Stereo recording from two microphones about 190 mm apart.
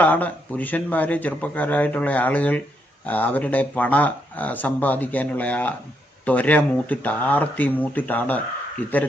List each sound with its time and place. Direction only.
0.0 s speech: 10° left (ahead or behind)